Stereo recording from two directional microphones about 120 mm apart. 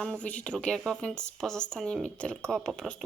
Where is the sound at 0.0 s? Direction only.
10° left (ahead or behind).